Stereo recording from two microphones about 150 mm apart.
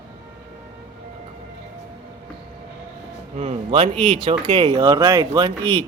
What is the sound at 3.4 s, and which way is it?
Speech, 40° right (ahead or behind).